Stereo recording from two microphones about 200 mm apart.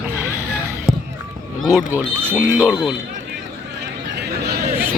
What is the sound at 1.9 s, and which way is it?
Speech, 10° right (ahead or behind).